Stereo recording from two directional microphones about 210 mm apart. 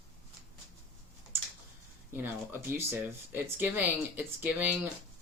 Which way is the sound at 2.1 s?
10° right (ahead or behind).